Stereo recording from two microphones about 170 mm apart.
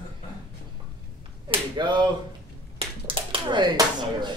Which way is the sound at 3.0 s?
30° right (ahead or behind).